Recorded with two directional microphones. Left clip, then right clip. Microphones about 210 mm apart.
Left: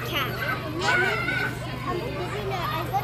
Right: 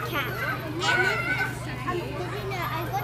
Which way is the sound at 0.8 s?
50° right (ahead or behind).